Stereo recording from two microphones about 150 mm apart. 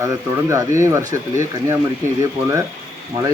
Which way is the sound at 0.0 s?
20° right (ahead or behind).